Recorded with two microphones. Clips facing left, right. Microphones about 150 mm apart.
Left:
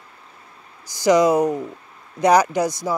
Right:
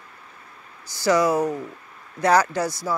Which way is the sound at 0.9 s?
15° left (ahead or behind).